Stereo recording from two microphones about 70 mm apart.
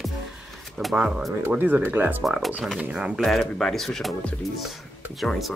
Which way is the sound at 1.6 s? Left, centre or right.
Right.